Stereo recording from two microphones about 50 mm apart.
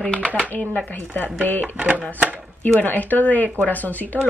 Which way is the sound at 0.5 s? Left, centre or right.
Left.